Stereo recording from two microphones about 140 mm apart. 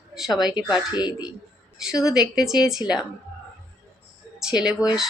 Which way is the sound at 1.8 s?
5° right (ahead or behind).